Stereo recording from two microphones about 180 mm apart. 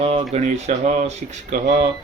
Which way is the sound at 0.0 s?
35° right (ahead or behind).